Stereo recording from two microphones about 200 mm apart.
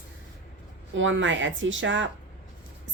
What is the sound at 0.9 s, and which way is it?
Rub, 70° right (ahead or behind).